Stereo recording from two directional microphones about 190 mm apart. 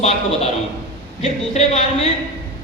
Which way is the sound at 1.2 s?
35° left (ahead or behind).